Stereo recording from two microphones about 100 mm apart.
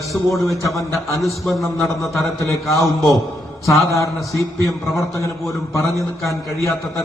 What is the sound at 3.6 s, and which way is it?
Speech, 30° left (ahead or behind).